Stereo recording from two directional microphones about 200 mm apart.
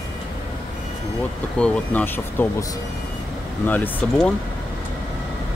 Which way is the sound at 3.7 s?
10° left (ahead or behind).